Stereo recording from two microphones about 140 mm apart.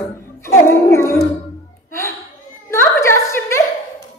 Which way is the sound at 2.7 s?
20° left (ahead or behind).